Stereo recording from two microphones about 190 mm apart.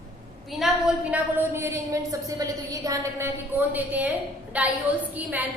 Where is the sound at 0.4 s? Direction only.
Centre (ahead or behind).